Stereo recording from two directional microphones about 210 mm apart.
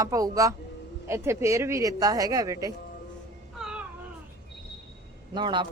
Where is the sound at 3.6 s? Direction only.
5° right (ahead or behind).